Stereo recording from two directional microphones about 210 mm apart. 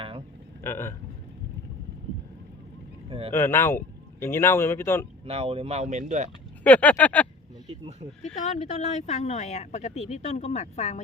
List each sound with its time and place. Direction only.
0.6 s speech: 10° left (ahead or behind)
3.1 s vehicle: 25° right (ahead or behind)
3.3 s speech: 10° left (ahead or behind)
5.2 s speech: 30° right (ahead or behind)
6.7 s speech: 5° left (ahead or behind)
8.4 s speech: 30° left (ahead or behind)